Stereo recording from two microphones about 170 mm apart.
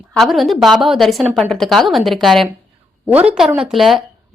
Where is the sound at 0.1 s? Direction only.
Centre (ahead or behind).